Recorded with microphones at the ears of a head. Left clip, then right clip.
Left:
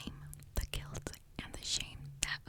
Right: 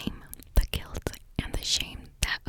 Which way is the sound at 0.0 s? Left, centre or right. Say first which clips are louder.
Right 11 dB; right.